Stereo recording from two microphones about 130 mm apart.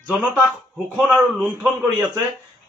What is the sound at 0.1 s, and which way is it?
Speech, 10° right (ahead or behind).